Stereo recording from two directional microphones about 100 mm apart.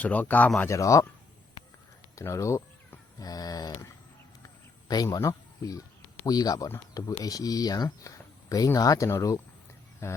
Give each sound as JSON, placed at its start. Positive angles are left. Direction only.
{"t": 0.0, "sound": "speech", "side_deg": 15}
{"t": 0.7, "sound": "speech", "side_deg": 30}
{"t": 2.1, "sound": "speech", "side_deg": 30}
{"t": 5.1, "sound": "speech", "side_deg": 35}